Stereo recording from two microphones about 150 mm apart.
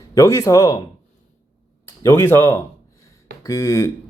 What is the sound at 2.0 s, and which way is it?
Speech, 20° left (ahead or behind).